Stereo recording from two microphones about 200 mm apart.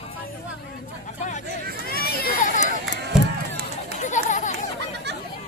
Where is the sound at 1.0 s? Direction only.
40° left (ahead or behind).